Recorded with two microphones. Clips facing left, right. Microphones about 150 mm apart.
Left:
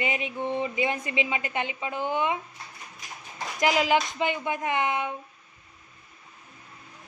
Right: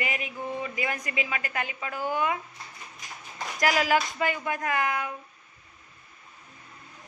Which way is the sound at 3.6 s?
20° left (ahead or behind).